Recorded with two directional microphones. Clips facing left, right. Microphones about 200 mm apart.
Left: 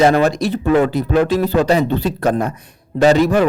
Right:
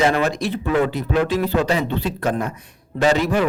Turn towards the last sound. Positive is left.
turn(degrees=40)  # may be behind; listen again after turning